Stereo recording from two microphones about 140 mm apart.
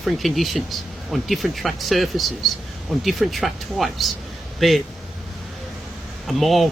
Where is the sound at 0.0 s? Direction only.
Centre (ahead or behind).